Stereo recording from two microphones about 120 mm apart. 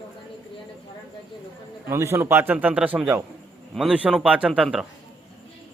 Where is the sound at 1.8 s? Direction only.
20° right (ahead or behind); by 4.8 s 5° right (ahead or behind).